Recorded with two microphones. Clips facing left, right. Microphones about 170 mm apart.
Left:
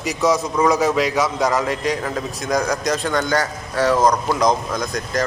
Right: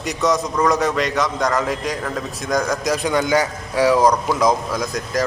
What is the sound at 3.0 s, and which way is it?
A man's voice, 10° right (ahead or behind).